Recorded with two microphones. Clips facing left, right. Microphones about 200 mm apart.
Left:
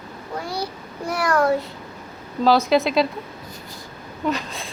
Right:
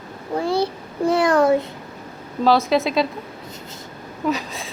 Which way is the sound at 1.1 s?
25° right (ahead or behind).